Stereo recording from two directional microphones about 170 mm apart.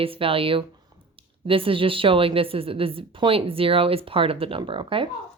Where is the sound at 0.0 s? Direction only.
35° right (ahead or behind).